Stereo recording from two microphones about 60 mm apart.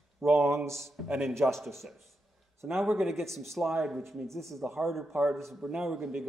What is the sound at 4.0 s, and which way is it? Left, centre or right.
Speech, right.